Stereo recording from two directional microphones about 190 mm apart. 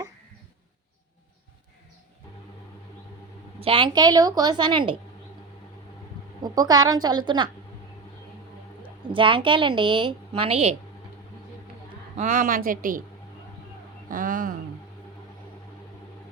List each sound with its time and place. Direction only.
3.6 s a woman's voice: 25° right (ahead or behind)
6.4 s a woman's voice: 20° right (ahead or behind)
8.8 s a woman's voice: 25° right (ahead or behind)
12.1 s speech: 40° right (ahead or behind)
14.1 s speech: 45° right (ahead or behind)